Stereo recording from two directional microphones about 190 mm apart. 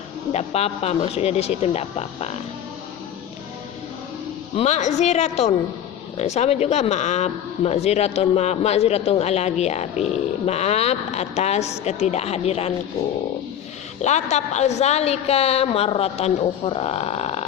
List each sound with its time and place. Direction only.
0.3 s speech: 35° left (ahead or behind)
4.5 s speech: 35° left (ahead or behind)
14.0 s speech: 35° left (ahead or behind)